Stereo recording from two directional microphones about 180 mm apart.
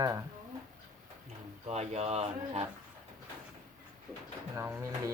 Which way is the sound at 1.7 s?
35° right (ahead or behind).